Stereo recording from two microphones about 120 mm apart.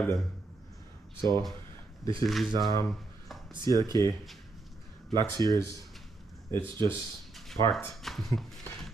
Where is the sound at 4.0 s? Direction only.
30° left (ahead or behind).